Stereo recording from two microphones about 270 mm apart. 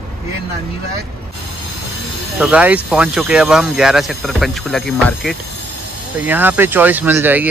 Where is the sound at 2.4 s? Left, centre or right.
Centre.